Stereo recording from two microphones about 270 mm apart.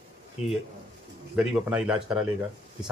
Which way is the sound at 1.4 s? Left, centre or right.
Centre.